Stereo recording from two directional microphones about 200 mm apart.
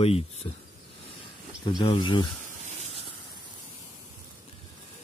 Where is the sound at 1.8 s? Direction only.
25° left (ahead or behind).